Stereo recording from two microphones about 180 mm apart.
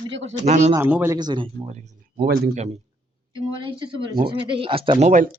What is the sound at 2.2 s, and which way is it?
Speech, 60° right (ahead or behind).